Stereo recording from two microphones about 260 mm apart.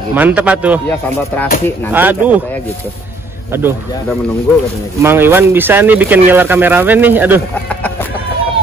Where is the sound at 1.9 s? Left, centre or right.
Centre.